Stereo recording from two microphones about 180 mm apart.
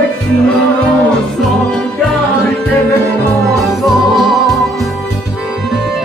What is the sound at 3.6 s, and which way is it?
Music, centre (ahead or behind).